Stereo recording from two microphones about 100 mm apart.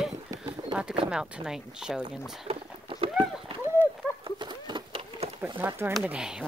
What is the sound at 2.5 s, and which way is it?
Boat, 65° right (ahead or behind).